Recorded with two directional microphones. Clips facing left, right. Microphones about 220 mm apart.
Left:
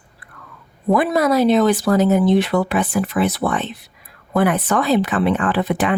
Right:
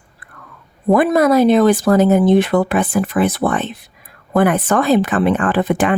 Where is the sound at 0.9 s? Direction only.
50° right (ahead or behind).